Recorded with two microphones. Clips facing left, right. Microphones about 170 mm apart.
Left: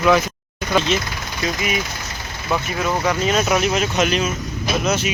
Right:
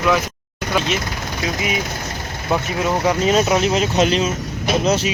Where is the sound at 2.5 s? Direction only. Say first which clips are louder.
Right 2 dB; 20° right (ahead or behind).